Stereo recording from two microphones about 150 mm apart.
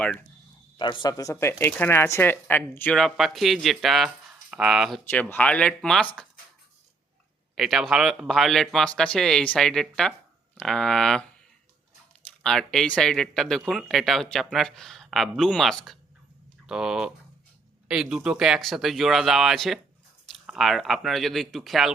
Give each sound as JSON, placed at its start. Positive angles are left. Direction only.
{"t": 0.8, "sound": "speech", "side_deg": 30}
{"t": 5.3, "sound": "speech", "side_deg": 10}
{"t": 7.5, "sound": "speech", "side_deg": 0}
{"t": 12.4, "sound": "speech", "side_deg": 5}